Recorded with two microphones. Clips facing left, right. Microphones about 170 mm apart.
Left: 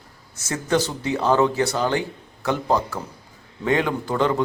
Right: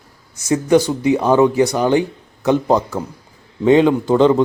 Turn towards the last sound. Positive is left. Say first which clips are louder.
# right 9 dB
turn(degrees=-25)  # may be behind; listen again after turning